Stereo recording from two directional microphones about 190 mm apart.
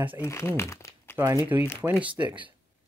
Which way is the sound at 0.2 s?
15° left (ahead or behind).